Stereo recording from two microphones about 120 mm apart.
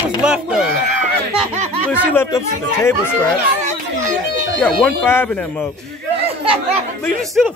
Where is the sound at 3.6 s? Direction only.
90° right.